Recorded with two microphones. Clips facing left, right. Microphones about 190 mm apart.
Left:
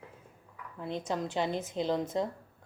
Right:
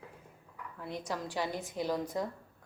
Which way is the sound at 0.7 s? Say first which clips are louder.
Left 4 dB; 20° left (ahead or behind).